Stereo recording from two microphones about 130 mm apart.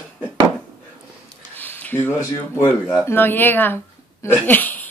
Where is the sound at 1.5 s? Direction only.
15° left (ahead or behind).